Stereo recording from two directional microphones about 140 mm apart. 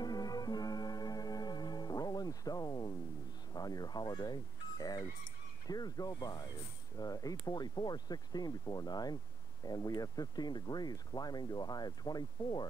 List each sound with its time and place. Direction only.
0.0 s music: 30° left (ahead or behind)
3.5 s a sound: 25° left (ahead or behind)
5.7 s speech: 30° left (ahead or behind)